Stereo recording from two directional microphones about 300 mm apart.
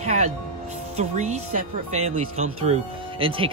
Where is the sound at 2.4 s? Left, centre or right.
Right.